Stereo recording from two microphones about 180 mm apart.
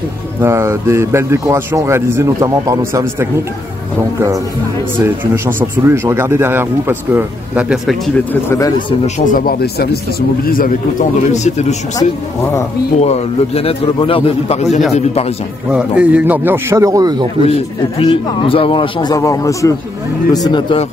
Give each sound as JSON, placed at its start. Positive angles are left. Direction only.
{"t": 0.4, "sound": "speech", "side_deg": -15}
{"t": 5.0, "sound": "speech", "side_deg": -10}
{"t": 8.3, "sound": "a man's voice", "side_deg": 15}
{"t": 9.0, "sound": "speech", "side_deg": 45}
{"t": 13.0, "sound": "a man's voice", "side_deg": 35}
{"t": 15.7, "sound": "speech", "side_deg": -5}
{"t": 17.5, "sound": "a man's voice", "side_deg": 30}